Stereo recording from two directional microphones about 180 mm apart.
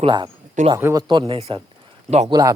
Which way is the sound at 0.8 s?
15° right (ahead or behind).